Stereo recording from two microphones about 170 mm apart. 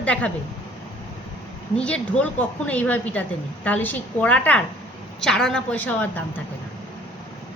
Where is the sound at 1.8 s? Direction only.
5° left (ahead or behind).